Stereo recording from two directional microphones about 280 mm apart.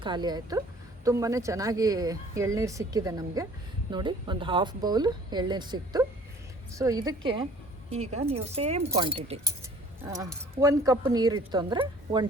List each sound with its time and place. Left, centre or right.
0.0 s a woman's voice: centre